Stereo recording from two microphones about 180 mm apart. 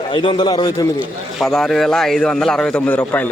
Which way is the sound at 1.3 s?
Centre (ahead or behind).